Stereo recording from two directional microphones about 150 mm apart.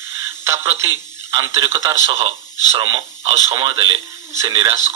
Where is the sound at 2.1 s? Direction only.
35° right (ahead or behind).